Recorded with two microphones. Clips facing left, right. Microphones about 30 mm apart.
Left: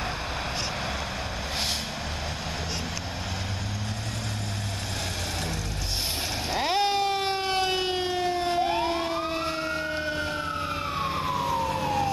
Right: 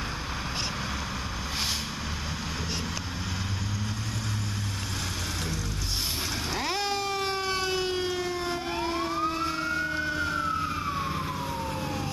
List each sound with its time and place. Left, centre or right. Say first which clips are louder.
6.5 s siren: left 6 dB; left
11.3 s emergency vehicle: left 6 dB; left